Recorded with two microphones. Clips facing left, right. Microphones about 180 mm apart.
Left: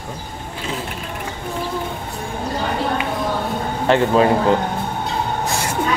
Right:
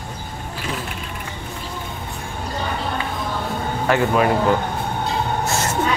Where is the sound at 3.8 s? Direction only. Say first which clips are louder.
Left 3 dB; 25° left (ahead or behind).